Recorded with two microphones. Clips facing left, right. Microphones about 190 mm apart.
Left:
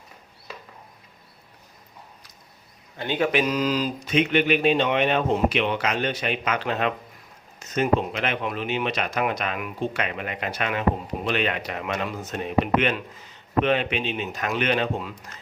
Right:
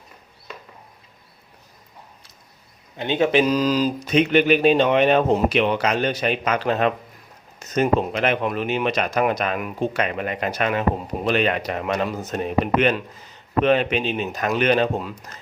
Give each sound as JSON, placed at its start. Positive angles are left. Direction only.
{"t": 3.0, "sound": "speech", "side_deg": -25}